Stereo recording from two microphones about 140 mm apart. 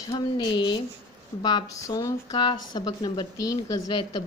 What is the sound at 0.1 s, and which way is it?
A woman's voice, 35° left (ahead or behind).